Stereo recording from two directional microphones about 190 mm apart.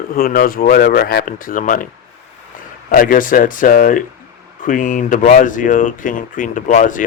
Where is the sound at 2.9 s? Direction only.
45° left (ahead or behind).